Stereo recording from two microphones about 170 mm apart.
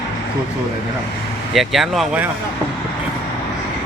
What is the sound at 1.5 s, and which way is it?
Speech, centre (ahead or behind).